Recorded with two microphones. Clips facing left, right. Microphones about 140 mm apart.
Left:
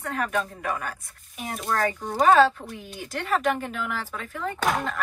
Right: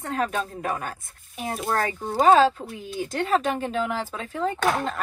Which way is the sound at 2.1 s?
20° right (ahead or behind).